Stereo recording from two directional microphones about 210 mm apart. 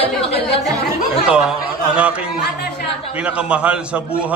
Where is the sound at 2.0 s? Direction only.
5° right (ahead or behind).